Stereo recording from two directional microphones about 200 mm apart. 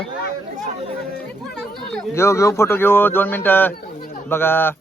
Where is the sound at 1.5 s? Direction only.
5° left (ahead or behind).